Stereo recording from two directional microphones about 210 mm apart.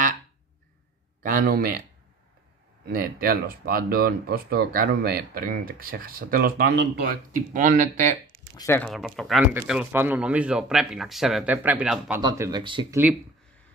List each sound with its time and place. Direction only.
1.2 s speech: 45° right (ahead or behind)
2.9 s speech: 45° right (ahead or behind)
8.5 s speech: 10° left (ahead or behind)
8.9 s speech: centre (ahead or behind)
12.2 s speech: 15° right (ahead or behind)